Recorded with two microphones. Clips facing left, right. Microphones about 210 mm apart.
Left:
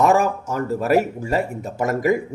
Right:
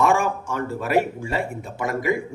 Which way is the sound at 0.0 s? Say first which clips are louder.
Left 3 dB; 40° left (ahead or behind).